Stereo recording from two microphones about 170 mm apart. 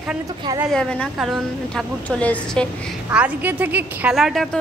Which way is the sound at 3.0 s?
10° right (ahead or behind).